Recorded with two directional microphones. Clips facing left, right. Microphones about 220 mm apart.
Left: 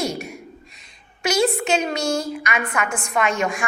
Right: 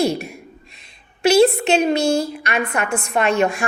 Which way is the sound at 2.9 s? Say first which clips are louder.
Right 5 dB; 60° right (ahead or behind).